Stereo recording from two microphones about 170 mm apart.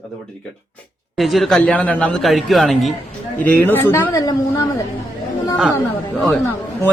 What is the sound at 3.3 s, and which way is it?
A woman's voice, 10° left (ahead or behind).